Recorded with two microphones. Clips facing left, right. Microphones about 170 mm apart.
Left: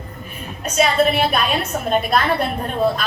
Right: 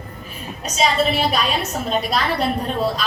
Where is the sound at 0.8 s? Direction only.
55° left (ahead or behind).